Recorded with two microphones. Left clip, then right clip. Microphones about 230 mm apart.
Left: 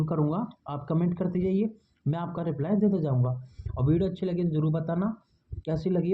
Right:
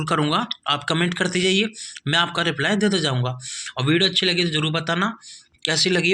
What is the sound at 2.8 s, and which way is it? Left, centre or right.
Speech, right.